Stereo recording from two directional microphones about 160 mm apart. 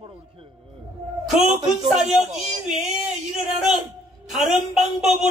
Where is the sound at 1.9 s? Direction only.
Centre (ahead or behind).